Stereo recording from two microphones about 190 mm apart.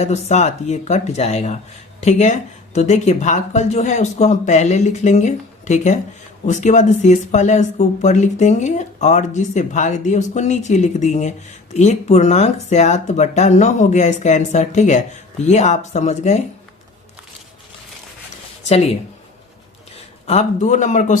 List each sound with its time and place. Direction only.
0.0 s speech: 35° left (ahead or behind)
20.2 s speech: 35° left (ahead or behind)